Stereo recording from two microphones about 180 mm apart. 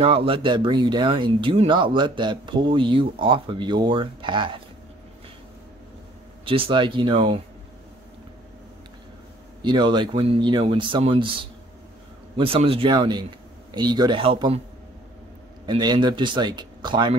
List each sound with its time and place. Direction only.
0.0 s speech: 30° right (ahead or behind)
6.4 s speech: 30° right (ahead or behind)
9.6 s speech: 25° right (ahead or behind)
15.6 s speech: 25° right (ahead or behind)